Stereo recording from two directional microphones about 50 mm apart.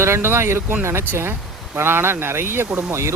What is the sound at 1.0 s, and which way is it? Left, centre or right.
Speech, right.